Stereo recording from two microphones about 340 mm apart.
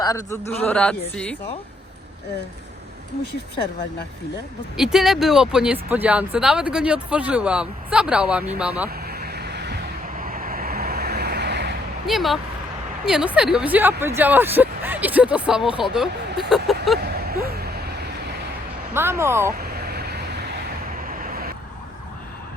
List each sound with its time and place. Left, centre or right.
0.0 s a man's voice: centre
0.6 s speech: centre
4.8 s speech: centre
9.0 s vehicle: right
12.0 s speech: centre
17.0 s a sound: right
18.9 s speech: centre
19.5 s vehicle: right